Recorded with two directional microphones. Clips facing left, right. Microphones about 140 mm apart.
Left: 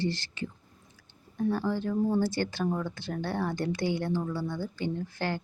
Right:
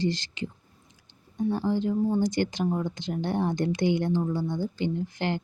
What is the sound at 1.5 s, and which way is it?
A woman's voice, 20° right (ahead or behind).